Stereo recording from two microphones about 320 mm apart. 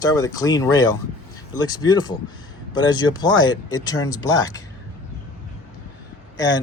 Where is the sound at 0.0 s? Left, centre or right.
Centre.